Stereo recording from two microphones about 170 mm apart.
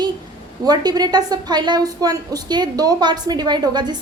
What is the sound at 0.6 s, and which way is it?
A woman's voice, 25° right (ahead or behind).